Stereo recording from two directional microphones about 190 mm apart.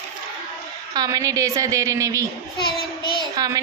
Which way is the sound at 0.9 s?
20° right (ahead or behind).